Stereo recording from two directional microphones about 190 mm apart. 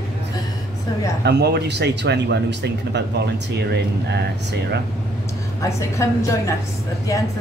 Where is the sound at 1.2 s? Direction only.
60° right (ahead or behind).